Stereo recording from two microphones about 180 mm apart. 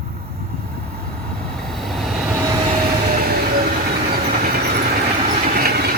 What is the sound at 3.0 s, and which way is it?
Train, 55° right (ahead or behind).